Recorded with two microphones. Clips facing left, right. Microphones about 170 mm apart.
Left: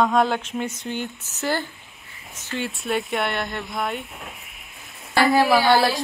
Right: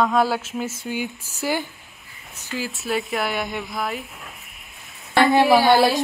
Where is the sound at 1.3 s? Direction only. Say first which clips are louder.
Even; 10° right (ahead or behind).